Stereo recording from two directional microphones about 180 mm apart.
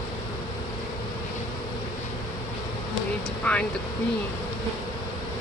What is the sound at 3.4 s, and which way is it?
Speech, 5° left (ahead or behind).